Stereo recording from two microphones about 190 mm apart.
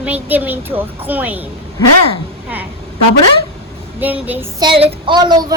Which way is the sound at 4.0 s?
10° right (ahead or behind).